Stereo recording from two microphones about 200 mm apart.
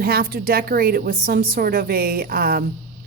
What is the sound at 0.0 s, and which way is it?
A woman's voice, 50° right (ahead or behind).